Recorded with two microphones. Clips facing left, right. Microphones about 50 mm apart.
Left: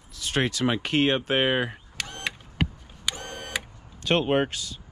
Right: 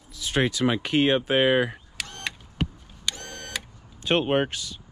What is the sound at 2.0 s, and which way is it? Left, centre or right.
Camera, centre.